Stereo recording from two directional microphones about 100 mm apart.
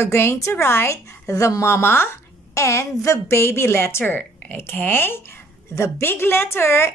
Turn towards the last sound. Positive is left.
turn(degrees=25)  # may be behind; listen again after turning